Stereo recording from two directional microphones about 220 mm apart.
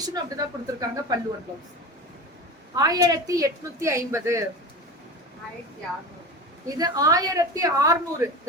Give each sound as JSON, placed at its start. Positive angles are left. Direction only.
{"t": 0.0, "sound": "speech", "side_deg": -15}
{"t": 2.7, "sound": "speech", "side_deg": -15}
{"t": 6.7, "sound": "speech", "side_deg": -15}